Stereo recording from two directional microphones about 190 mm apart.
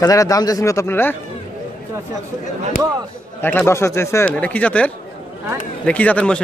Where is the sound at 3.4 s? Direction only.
10° left (ahead or behind).